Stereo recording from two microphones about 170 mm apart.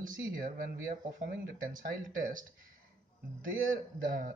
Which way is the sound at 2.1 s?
55° right (ahead or behind).